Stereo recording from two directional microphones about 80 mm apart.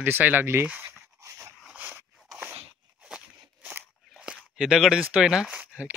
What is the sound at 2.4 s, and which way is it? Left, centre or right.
Crunch, right.